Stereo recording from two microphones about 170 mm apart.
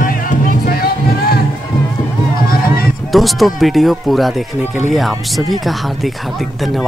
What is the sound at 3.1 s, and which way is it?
Speech, centre (ahead or behind).